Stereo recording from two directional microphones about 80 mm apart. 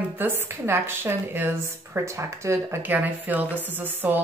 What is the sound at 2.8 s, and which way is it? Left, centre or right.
Speech, right.